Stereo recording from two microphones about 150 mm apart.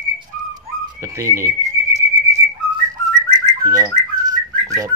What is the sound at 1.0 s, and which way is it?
Speech, 20° right (ahead or behind).